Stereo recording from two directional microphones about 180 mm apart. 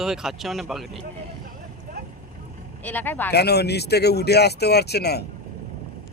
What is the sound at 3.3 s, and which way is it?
Speech, 65° left (ahead or behind).